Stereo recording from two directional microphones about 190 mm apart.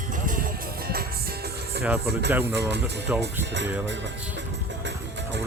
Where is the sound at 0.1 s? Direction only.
45° right (ahead or behind).